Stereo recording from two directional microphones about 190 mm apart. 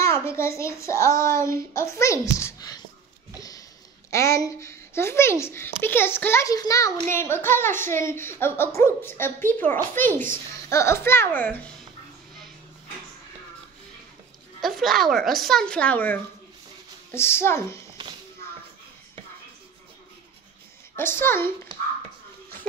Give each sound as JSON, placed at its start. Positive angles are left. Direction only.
{"t": 0.0, "sound": "speech", "side_deg": 15}
{"t": 3.3, "sound": "a sound", "side_deg": 20}
{"t": 4.1, "sound": "speech", "side_deg": 15}
{"t": 14.6, "sound": "speech", "side_deg": 0}
{"t": 20.9, "sound": "speech", "side_deg": 10}